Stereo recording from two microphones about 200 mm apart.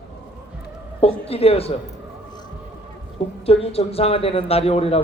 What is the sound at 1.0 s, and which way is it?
Speech, 30° left (ahead or behind).